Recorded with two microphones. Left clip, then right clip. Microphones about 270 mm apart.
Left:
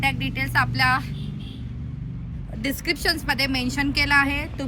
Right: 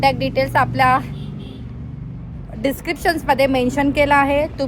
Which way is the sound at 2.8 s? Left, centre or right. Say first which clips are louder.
Right 5 dB; centre.